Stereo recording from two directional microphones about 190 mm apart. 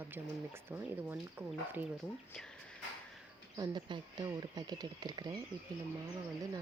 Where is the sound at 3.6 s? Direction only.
25° right (ahead or behind).